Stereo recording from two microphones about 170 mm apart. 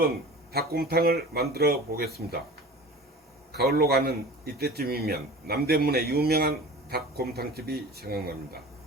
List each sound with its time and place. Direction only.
0.5 s a man's voice: 65° right (ahead or behind)
3.5 s a man's voice: 70° right (ahead or behind)